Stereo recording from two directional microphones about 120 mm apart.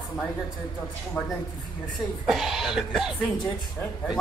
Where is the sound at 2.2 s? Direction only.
Centre (ahead or behind).